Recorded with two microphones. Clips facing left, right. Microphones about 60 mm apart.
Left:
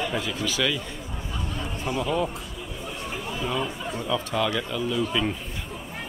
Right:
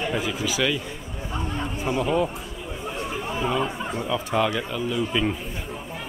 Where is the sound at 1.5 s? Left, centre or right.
Right.